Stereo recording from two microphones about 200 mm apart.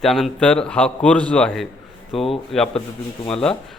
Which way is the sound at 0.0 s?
Centre (ahead or behind).